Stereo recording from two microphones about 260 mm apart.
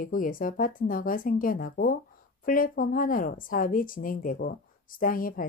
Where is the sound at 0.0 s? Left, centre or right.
Left.